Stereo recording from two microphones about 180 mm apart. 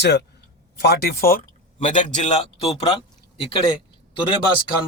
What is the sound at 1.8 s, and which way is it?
A man's voice, 40° left (ahead or behind).